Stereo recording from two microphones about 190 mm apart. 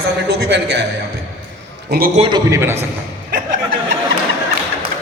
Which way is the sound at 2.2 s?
20° right (ahead or behind).